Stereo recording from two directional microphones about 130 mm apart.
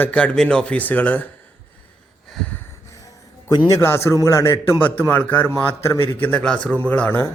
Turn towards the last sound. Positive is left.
turn(degrees=15)  # may be behind; listen again after turning